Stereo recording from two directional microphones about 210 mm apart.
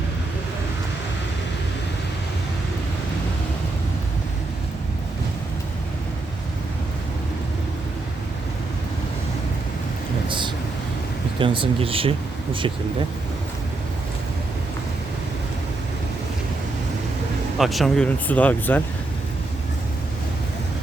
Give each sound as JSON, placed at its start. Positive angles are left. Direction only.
{"t": 10.2, "sound": "a sound", "side_deg": -25}
{"t": 11.3, "sound": "speech", "side_deg": -25}
{"t": 17.6, "sound": "speech", "side_deg": 0}